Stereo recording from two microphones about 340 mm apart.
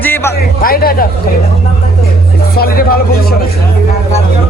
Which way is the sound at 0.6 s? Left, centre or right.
Left.